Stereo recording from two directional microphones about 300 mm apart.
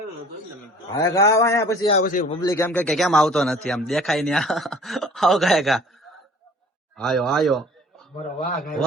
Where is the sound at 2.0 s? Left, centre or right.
Left.